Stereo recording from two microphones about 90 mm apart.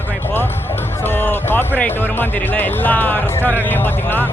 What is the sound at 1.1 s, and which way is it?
Speech, 25° left (ahead or behind).